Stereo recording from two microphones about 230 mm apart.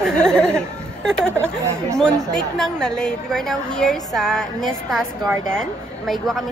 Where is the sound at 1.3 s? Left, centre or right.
Centre.